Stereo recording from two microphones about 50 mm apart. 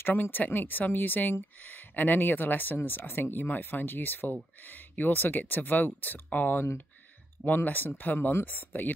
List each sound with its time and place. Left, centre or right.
0.0 s speech: left